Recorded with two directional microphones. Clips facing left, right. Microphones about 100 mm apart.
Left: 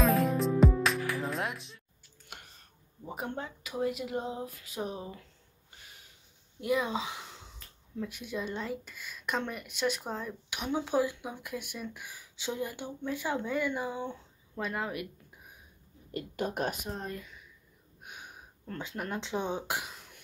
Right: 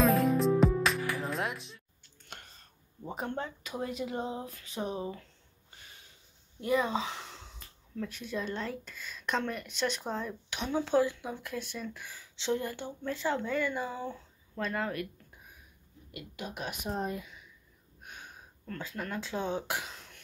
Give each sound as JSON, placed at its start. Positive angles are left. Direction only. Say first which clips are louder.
{"t": 0.0, "sound": "music", "louder": "right 1 dB", "side_deg": 0}
{"t": 2.3, "sound": "clicking", "louder": "right 1 dB", "side_deg": 10}
{"t": 3.1, "sound": "speech", "louder": "right 1 dB", "side_deg": 10}
{"t": 6.6, "sound": "speech", "louder": "right 1 dB", "side_deg": 5}
{"t": 16.1, "sound": "speech", "louder": "left 8 dB", "side_deg": 45}
{"t": 16.9, "sound": "speech", "louder": "right 4 dB", "side_deg": -10}
{"t": 18.0, "sound": "a sound", "louder": "left 1 dB", "side_deg": 15}
{"t": 18.7, "sound": "speech", "louder": "left 1 dB", "side_deg": 20}